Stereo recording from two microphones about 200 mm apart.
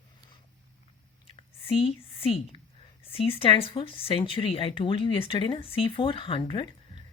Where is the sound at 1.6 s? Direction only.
30° left (ahead or behind).